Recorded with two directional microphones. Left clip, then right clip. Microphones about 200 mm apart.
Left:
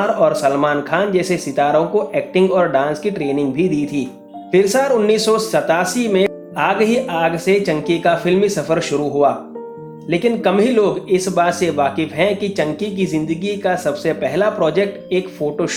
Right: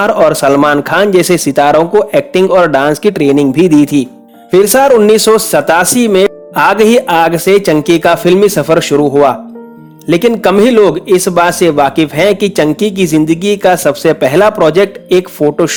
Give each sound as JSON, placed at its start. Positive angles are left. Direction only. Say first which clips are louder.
{"t": 0.2, "sound": "speech", "louder": "right 7 dB", "side_deg": -50}